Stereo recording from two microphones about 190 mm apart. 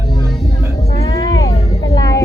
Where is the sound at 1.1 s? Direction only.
20° left (ahead or behind).